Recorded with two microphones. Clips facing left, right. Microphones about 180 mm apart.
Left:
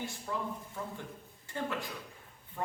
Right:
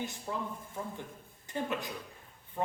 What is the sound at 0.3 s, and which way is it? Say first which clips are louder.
Speech: even; 20° right (ahead or behind).